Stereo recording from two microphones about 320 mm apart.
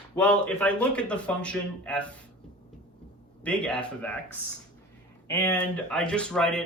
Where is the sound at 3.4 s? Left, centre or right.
Centre.